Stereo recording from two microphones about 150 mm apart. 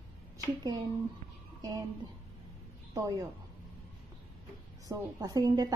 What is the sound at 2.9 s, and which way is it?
Speech, 20° right (ahead or behind).